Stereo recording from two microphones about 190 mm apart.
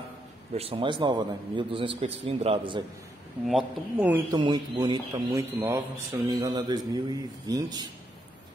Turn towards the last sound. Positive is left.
turn(degrees=-20)  # may be behind; listen again after turning